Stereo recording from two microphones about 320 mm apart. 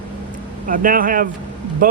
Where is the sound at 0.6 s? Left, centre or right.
Right.